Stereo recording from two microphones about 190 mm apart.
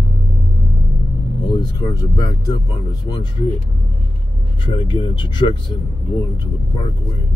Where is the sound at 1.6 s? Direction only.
20° left (ahead or behind).